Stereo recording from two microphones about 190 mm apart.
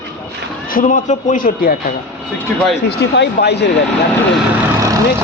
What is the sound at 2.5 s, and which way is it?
Speech, 5° left (ahead or behind).